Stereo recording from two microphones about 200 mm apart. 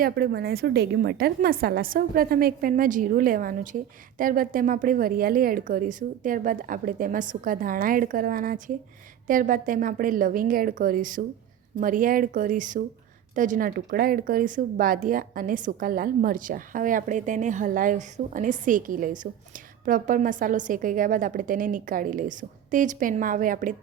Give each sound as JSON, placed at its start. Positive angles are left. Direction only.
{"t": 0.0, "sound": "a woman's voice", "side_deg": -50}